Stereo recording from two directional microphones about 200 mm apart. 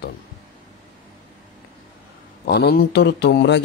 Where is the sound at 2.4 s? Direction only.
50° left (ahead or behind).